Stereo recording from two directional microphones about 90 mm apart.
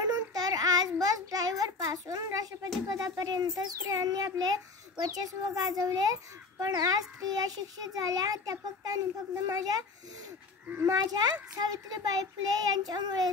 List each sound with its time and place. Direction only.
0.0 s child singing: 45° right (ahead or behind)
2.9 s a child's voice: 45° right (ahead or behind)
11.0 s a child's voice: 50° right (ahead or behind)